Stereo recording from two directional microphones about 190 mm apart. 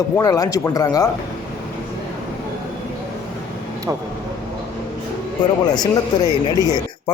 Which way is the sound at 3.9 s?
15° right (ahead or behind).